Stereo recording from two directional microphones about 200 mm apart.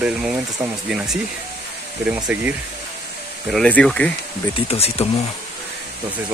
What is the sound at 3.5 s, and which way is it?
Speech, 5° left (ahead or behind).